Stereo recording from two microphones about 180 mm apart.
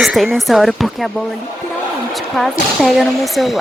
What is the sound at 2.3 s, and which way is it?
Speech, centre (ahead or behind).